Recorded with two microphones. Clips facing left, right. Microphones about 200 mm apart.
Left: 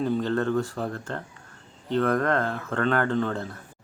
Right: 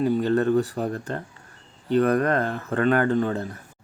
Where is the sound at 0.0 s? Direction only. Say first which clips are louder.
Right 4 dB; 10° right (ahead or behind).